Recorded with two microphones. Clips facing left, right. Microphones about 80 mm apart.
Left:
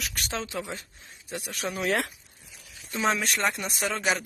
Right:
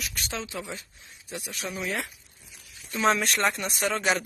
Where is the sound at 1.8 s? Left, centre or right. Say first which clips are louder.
Left 5 dB; left.